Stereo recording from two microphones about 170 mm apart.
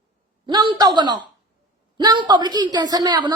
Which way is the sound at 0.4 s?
25° right (ahead or behind).